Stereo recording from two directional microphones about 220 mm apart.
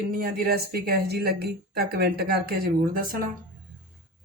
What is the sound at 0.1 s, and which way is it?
A woman's voice, 40° right (ahead or behind).